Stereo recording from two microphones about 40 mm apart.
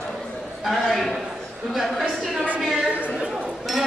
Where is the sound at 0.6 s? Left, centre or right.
Centre.